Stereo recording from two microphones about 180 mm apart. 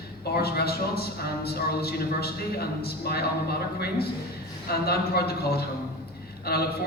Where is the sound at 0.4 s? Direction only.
60° left (ahead or behind).